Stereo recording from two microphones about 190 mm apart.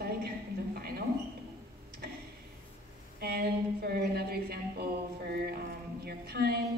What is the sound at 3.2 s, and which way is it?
A woman's voice, 55° right (ahead or behind).